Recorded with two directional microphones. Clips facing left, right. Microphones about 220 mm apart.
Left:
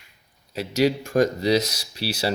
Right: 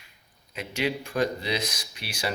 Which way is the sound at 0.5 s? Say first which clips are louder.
Left 8 dB; 40° left (ahead or behind).